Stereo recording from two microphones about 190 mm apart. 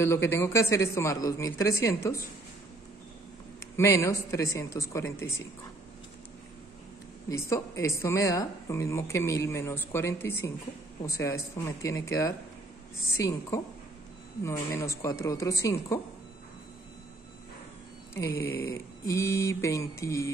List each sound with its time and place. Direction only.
0.0 s speech: 15° left (ahead or behind)
3.7 s speech: 15° left (ahead or behind)
7.2 s speech: 15° left (ahead or behind)
18.1 s speech: 15° left (ahead or behind)